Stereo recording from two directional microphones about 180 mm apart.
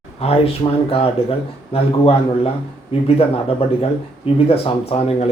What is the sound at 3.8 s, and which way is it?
Speech, 35° left (ahead or behind).